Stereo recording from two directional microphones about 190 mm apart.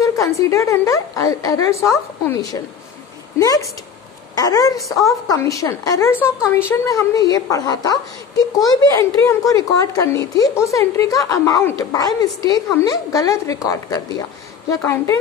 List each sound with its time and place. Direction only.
0.0 s a woman's voice: 15° left (ahead or behind)